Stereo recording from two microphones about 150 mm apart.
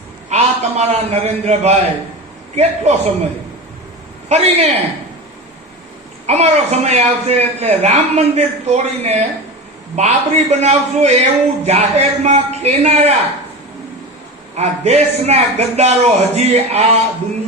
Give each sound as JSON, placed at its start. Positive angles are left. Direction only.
{"t": 0.3, "sound": "a man's voice", "side_deg": -50}
{"t": 4.3, "sound": "a man's voice", "side_deg": -45}
{"t": 6.2, "sound": "a man's voice", "side_deg": -45}
{"t": 14.5, "sound": "a man's voice", "side_deg": -45}